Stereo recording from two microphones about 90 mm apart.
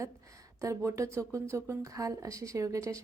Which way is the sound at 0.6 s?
35° right (ahead or behind).